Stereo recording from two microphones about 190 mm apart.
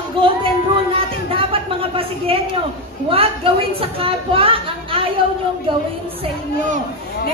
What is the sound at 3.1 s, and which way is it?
Speech, 30° right (ahead or behind).